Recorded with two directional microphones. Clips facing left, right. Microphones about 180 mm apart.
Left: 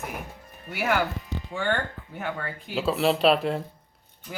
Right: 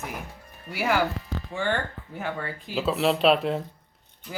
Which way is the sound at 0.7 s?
Centre (ahead or behind).